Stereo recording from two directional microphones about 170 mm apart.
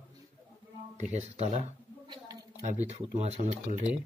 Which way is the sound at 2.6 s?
40° right (ahead or behind).